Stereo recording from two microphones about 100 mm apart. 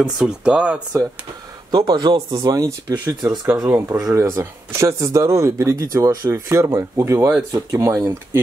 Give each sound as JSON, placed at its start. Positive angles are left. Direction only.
{"t": 0.0, "sound": "speech", "side_deg": -10}
{"t": 1.7, "sound": "speech", "side_deg": -40}